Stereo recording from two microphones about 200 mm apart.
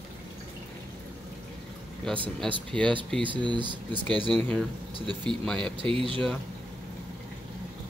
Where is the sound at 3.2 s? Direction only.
25° right (ahead or behind).